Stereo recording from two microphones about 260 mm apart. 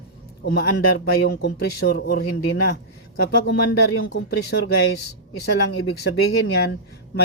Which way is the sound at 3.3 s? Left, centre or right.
Left.